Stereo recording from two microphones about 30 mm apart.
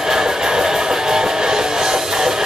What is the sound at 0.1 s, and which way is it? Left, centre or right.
Music, centre.